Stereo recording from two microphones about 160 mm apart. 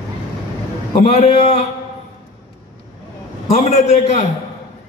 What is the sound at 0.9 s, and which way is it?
Speech, 40° left (ahead or behind).